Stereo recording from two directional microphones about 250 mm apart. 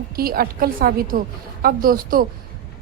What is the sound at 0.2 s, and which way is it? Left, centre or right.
A woman's voice, right.